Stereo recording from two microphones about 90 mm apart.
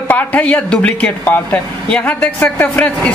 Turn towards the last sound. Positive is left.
turn(degrees=15)  # may be behind; listen again after turning